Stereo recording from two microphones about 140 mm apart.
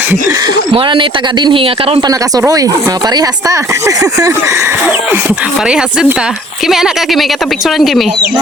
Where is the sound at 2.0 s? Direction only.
25° right (ahead or behind).